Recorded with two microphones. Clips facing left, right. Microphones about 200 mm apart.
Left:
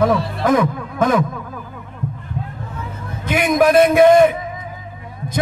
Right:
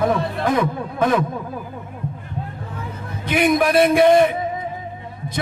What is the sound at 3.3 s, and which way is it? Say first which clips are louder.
A man's voice: left 2 dB; 45° left (ahead or behind).